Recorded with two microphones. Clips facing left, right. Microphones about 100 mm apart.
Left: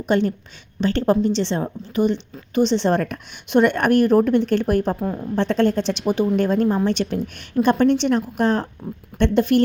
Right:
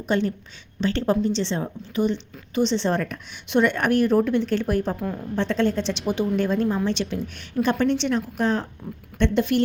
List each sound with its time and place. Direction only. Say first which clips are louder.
0.1 s speech: left 4 dB; 55° left (ahead or behind)
1.5 s speech: left 3 dB; 45° left (ahead or behind)